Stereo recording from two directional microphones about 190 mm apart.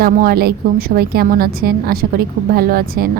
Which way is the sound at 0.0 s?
50° right (ahead or behind).